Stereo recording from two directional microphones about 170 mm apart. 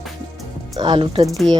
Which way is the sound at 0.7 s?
30° right (ahead or behind).